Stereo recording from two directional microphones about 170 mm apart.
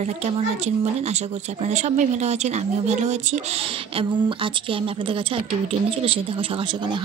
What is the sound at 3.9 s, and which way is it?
A woman's voice, 30° right (ahead or behind).